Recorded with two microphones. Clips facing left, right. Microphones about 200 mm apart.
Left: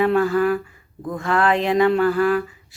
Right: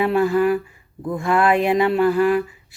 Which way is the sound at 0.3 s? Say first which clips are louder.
Right 1 dB; 10° right (ahead or behind).